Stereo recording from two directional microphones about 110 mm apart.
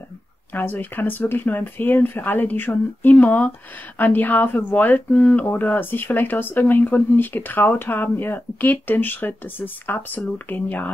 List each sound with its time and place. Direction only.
0.5 s speech: 15° left (ahead or behind)